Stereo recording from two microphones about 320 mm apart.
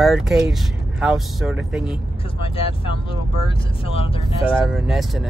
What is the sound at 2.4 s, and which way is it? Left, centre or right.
Speech, centre.